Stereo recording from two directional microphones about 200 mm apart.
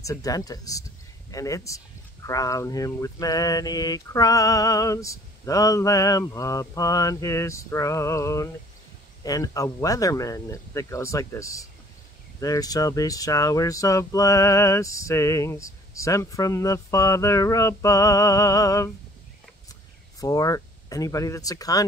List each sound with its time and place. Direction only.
0.0 s speech: 15° left (ahead or behind)
20.2 s speech: 15° left (ahead or behind)